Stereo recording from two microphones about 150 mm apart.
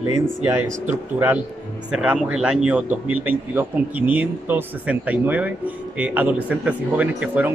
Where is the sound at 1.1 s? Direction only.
10° right (ahead or behind).